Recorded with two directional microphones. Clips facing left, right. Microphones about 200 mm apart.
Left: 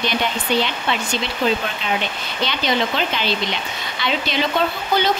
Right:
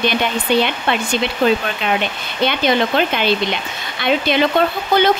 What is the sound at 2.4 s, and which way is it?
Speech, 55° right (ahead or behind).